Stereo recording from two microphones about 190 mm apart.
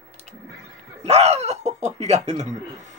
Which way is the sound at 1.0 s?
35° right (ahead or behind).